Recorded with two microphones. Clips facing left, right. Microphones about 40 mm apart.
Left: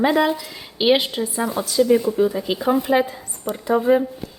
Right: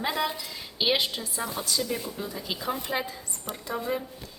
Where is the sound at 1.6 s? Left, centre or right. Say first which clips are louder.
Left 13 dB; centre.